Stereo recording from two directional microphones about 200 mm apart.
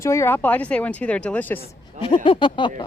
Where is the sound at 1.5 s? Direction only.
25° left (ahead or behind).